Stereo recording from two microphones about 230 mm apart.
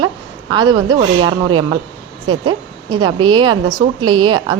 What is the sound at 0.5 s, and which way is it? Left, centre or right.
A woman's voice, centre.